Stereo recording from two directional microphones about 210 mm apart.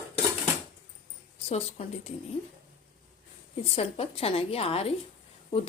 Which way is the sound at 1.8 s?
25° left (ahead or behind).